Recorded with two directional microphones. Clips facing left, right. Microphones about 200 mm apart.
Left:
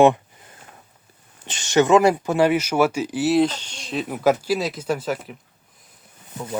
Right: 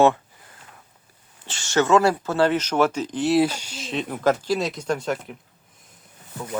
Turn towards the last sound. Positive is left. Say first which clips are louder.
# left 1 dB
turn(degrees=5)  # may be behind; listen again after turning